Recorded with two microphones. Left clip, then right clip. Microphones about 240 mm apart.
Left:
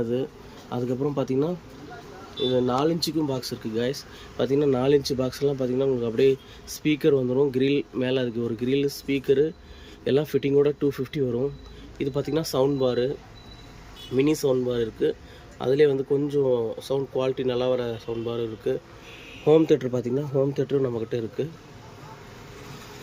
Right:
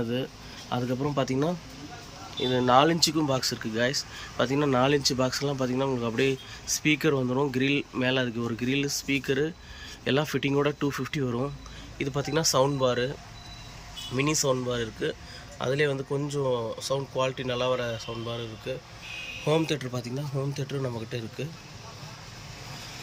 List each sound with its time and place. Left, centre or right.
0.7 s speech: centre
14.2 s speech: centre